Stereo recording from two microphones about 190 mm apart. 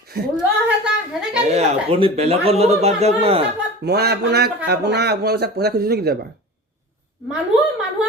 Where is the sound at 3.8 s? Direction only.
60° right (ahead or behind).